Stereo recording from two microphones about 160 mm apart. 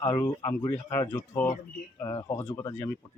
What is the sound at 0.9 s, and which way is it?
Speech, 20° left (ahead or behind).